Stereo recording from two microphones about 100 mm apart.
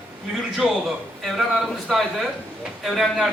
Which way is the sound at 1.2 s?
Centre (ahead or behind).